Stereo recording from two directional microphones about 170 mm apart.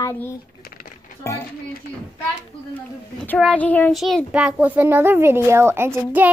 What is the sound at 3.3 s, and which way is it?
A child's voice, 5° left (ahead or behind).